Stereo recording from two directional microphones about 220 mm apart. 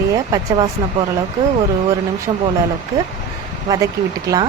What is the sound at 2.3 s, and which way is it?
Speech, 20° right (ahead or behind).